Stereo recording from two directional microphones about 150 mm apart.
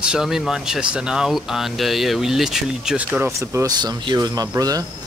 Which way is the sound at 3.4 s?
20° right (ahead or behind).